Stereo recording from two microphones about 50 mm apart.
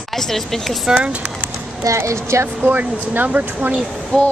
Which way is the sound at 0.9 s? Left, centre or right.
Right.